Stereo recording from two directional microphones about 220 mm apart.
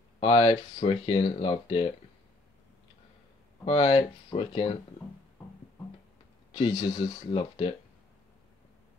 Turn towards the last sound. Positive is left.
turn(degrees=25)  # may be behind; listen again after turning